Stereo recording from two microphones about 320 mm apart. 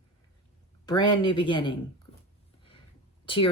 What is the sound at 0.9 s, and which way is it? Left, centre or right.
Speech, centre.